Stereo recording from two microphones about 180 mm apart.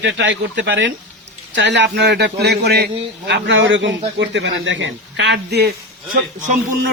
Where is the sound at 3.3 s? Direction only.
85° right; by 5.7 s 65° right (ahead or behind).